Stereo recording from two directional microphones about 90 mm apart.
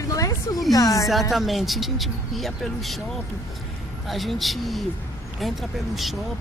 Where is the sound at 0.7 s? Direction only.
40° left (ahead or behind).